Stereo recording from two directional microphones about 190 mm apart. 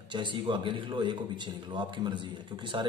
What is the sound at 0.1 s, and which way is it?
A man's voice, 25° right (ahead or behind).